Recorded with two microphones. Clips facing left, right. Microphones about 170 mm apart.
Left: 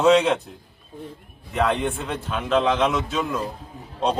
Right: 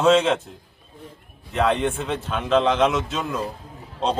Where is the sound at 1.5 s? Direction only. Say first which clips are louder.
Right 1 dB; 5° left (ahead or behind).